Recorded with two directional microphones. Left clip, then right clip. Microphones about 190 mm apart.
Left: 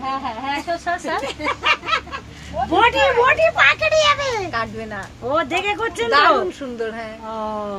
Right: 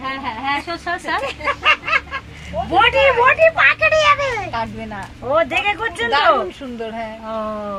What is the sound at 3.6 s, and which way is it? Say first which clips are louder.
Speech: right 1 dB; 40° left (ahead or behind).